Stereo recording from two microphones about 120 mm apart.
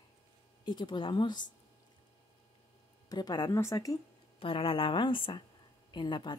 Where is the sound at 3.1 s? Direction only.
35° left (ahead or behind).